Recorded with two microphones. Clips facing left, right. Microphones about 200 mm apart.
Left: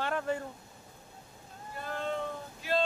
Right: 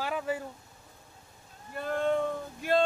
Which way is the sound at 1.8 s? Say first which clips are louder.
Right 7 dB; 55° right (ahead or behind).